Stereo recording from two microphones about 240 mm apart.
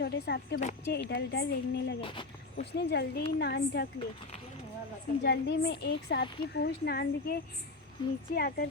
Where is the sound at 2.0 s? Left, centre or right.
Left.